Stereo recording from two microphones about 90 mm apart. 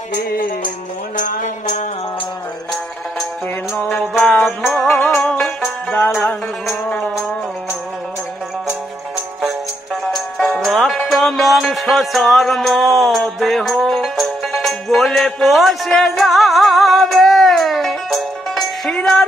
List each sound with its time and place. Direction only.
4.4 s music: centre (ahead or behind)
7.0 s music: centre (ahead or behind)
8.6 s music: 10° right (ahead or behind)
10.0 s music: 5° left (ahead or behind)